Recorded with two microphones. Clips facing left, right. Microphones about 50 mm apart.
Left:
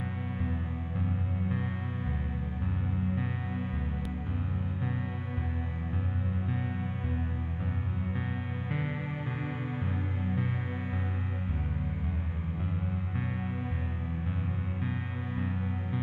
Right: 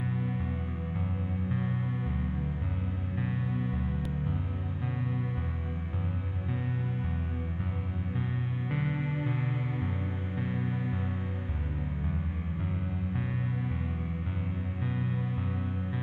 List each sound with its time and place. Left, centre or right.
8.6 s music: centre